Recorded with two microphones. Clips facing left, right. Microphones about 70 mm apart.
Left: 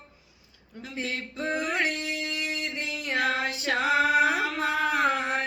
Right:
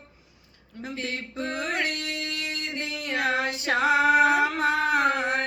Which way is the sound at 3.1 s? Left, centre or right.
Right.